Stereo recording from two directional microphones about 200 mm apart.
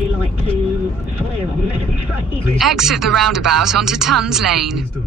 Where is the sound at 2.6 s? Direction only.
Centre (ahead or behind).